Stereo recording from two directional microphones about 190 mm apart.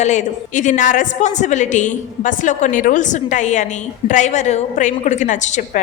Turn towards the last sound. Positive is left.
turn(degrees=40)  # may be behind; listen again after turning